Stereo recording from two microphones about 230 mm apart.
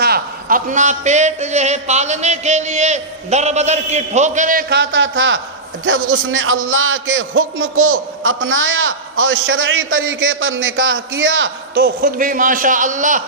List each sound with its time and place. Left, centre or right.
0.0 s a man's voice: right
11.7 s speech: right